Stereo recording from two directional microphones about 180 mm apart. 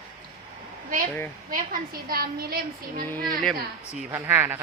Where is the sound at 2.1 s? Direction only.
60° right (ahead or behind).